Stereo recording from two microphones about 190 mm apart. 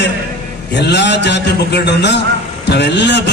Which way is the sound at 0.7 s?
65° left (ahead or behind).